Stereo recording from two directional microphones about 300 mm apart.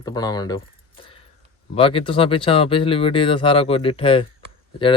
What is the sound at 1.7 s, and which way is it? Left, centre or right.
Speech, centre.